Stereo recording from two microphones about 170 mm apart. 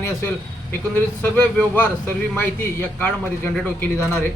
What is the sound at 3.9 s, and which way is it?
Speech, 15° left (ahead or behind).